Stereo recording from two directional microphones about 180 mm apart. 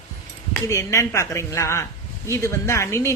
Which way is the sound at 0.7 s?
15° left (ahead or behind).